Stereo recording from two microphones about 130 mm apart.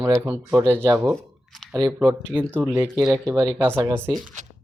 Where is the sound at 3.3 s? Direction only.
30° right (ahead or behind).